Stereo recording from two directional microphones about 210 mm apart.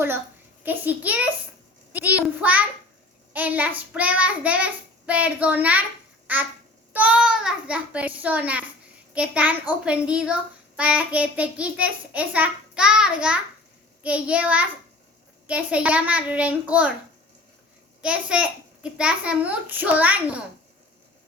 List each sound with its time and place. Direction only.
0.6 s child singing: 10° right (ahead or behind)
9.1 s a child's voice: 5° right (ahead or behind)
18.0 s a child's voice: 5° right (ahead or behind)